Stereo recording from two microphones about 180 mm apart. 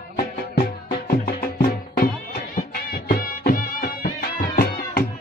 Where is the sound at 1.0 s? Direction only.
55° left (ahead or behind).